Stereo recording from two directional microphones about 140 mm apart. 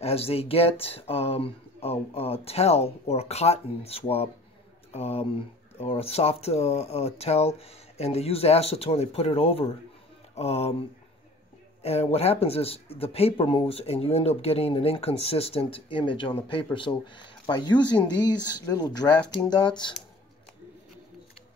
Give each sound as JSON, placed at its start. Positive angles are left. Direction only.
{"t": 0.0, "sound": "speech", "side_deg": 45}